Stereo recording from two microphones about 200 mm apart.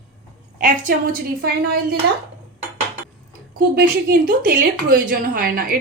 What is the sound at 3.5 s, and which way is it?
A woman's voice, 50° right (ahead or behind).